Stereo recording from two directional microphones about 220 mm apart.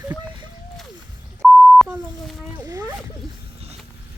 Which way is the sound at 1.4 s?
Centre (ahead or behind).